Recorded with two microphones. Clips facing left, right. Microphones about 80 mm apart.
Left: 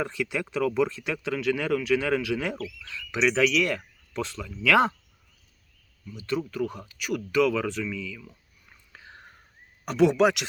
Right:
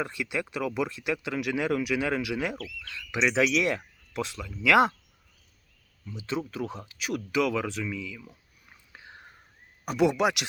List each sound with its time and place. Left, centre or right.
0.0 s speech: centre
3.1 s speech: centre
6.1 s speech: centre
7.3 s a sound: centre
9.8 s speech: centre